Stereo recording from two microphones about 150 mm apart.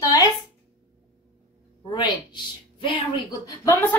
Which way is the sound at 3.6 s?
15° left (ahead or behind).